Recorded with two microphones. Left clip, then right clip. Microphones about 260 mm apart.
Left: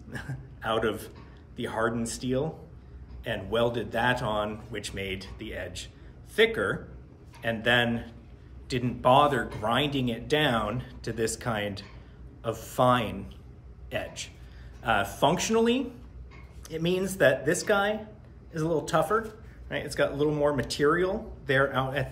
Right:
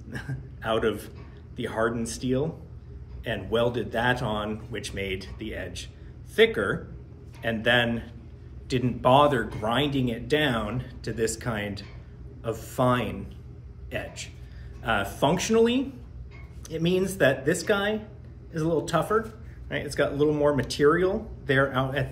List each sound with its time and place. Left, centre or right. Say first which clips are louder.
0.1 s a man's voice: right 2 dB; centre